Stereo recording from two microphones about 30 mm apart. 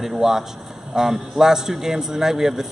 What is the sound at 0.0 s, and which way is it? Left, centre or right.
Speech, centre.